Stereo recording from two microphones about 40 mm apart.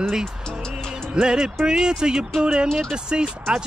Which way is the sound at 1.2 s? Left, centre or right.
Right.